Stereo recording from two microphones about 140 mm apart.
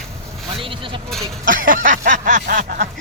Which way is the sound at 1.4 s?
80° right.